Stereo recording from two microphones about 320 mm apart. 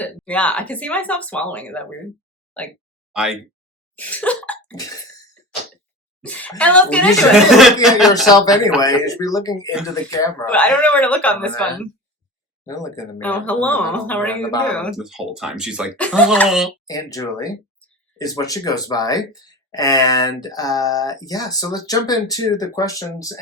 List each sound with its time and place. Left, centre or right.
0.0 s speech: centre
3.1 s speech: centre
3.9 s cough: centre
6.2 s speech: centre
8.3 s speech: centre
16.8 s speech: centre